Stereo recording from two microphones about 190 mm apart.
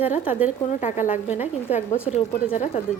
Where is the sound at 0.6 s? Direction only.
40° left (ahead or behind).